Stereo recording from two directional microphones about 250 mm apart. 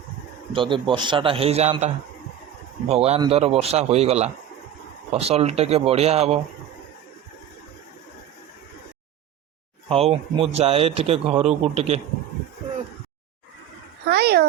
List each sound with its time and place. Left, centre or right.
0.5 s speech: centre
2.9 s speech: right
9.9 s speech: right
14.1 s a child's voice: right